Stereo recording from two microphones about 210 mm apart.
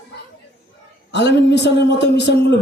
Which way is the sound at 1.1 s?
55° left (ahead or behind).